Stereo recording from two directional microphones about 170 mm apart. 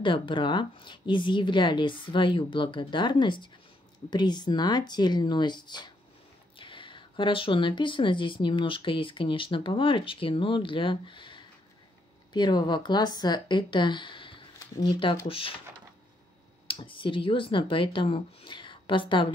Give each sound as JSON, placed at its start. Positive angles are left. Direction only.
{"t": 0.0, "sound": "speech", "side_deg": 30}
{"t": 16.6, "sound": "speech", "side_deg": 30}